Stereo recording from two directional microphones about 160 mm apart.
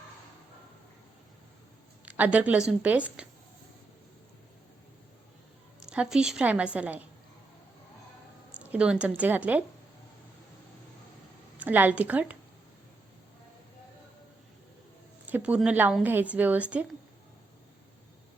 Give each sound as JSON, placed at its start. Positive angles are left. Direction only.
{"t": 2.0, "sound": "a woman's voice", "side_deg": -10}
{"t": 5.8, "sound": "a woman's voice", "side_deg": -5}
{"t": 8.5, "sound": "a woman's voice", "side_deg": -5}
{"t": 11.6, "sound": "a woman's voice", "side_deg": -10}
{"t": 15.3, "sound": "a woman's voice", "side_deg": -10}